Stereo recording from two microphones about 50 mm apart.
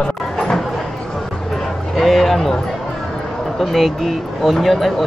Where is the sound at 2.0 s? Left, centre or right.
Centre.